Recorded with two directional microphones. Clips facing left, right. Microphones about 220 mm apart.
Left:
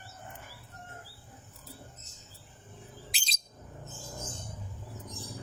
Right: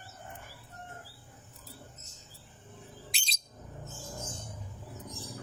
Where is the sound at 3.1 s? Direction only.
Centre (ahead or behind).